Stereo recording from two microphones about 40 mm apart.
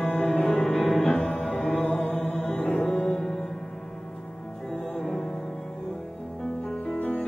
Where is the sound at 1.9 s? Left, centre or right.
Left.